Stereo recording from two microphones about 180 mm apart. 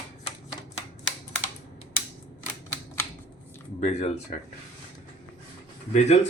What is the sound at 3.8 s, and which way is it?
Speech, 35° left (ahead or behind).